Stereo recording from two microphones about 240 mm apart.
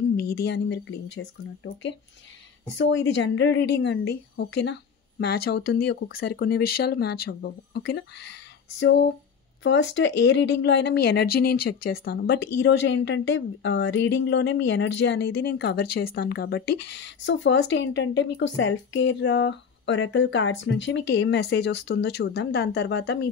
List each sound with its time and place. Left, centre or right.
0.2 s a woman's voice: left